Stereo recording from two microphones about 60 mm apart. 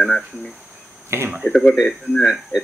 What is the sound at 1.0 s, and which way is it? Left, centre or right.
Speech, right.